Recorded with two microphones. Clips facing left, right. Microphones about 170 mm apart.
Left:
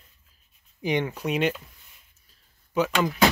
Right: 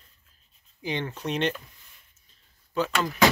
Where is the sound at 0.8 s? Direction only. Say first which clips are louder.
Left 5 dB; 15° left (ahead or behind).